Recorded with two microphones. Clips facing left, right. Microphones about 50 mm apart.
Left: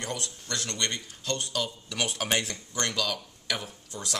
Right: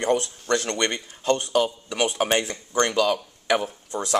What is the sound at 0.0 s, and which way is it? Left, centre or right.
Speech, right.